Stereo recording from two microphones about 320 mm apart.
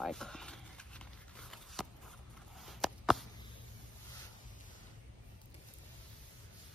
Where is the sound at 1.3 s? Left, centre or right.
Centre.